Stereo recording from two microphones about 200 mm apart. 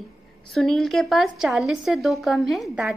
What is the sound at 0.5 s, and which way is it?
A woman's voice, centre (ahead or behind).